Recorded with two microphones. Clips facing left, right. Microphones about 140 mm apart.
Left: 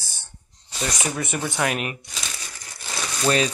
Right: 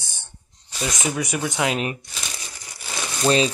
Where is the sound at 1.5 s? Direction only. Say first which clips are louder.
Right 1 dB; 15° right (ahead or behind).